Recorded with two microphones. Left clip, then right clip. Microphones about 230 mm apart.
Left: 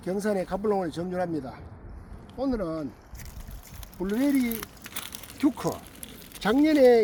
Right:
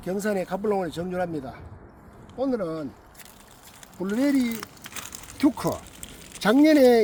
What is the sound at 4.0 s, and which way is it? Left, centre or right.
Speech, right.